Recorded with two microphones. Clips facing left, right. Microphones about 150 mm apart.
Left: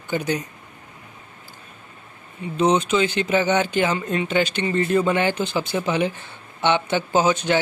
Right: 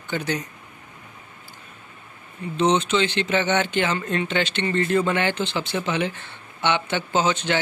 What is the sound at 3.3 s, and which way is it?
Speech, 10° left (ahead or behind).